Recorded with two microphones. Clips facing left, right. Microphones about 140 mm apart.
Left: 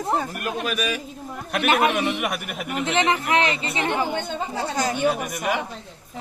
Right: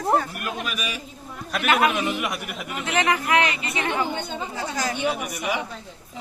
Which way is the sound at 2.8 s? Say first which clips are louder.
Left 1 dB; 25° left (ahead or behind).